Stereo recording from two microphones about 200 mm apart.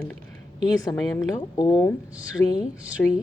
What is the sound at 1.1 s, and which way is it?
A woman's voice, 20° left (ahead or behind).